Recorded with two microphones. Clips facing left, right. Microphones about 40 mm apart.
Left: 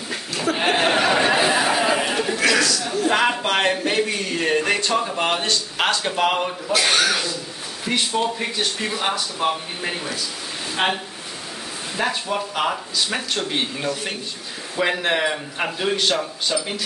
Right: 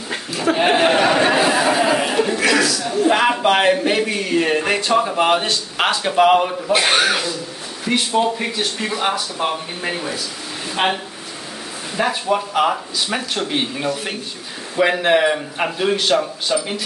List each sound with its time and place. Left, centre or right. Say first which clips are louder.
0.6 s a sound: right 4 dB; centre
1.4 s chatter: right 2 dB; centre
1.7 s a sound: right 3 dB; centre
3.1 s speech: right 4 dB; centre
6.7 s speech: right 3 dB; right
7.8 s speech: right 4 dB; centre
12.0 s speech: right 5 dB; centre